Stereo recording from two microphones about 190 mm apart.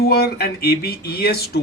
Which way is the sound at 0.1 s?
55° left (ahead or behind).